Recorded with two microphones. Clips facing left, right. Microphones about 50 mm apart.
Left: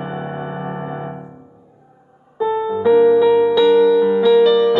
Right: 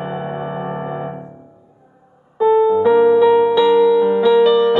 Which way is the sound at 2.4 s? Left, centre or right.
Right.